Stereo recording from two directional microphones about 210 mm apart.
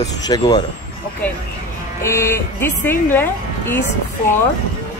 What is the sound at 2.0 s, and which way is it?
A woman's voice, 15° left (ahead or behind).